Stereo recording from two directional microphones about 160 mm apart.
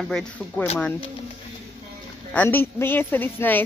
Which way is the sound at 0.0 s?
5° left (ahead or behind).